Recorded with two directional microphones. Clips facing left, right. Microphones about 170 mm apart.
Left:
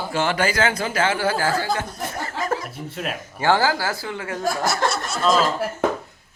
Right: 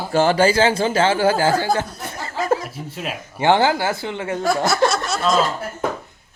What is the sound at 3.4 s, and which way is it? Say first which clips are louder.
A woman's voice: right 3 dB; 20° right (ahead or behind).